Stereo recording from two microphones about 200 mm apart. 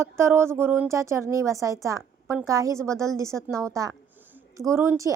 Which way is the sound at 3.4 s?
Centre (ahead or behind).